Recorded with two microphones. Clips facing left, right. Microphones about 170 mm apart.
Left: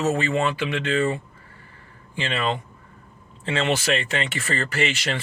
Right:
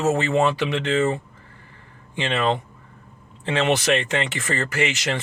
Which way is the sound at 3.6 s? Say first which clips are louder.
Right 3 dB; 20° right (ahead or behind).